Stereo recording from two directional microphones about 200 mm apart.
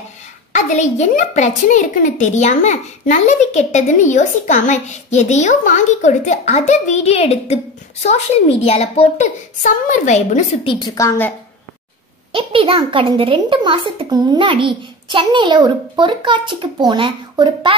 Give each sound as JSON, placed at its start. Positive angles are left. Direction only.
{"t": 0.5, "sound": "a child's voice", "side_deg": 35}
{"t": 12.3, "sound": "a child's voice", "side_deg": -25}